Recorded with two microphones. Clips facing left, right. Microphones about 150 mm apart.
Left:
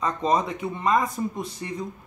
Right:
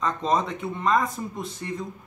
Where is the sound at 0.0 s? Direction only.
10° left (ahead or behind).